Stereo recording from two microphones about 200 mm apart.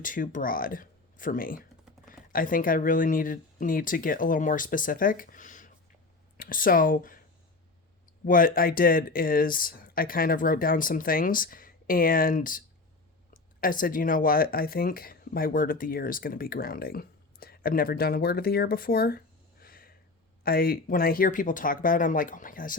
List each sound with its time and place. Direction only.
0.0 s speech: 40° left (ahead or behind)
8.2 s speech: 45° left (ahead or behind)
19.6 s a sound: 45° left (ahead or behind)
20.4 s speech: 50° left (ahead or behind)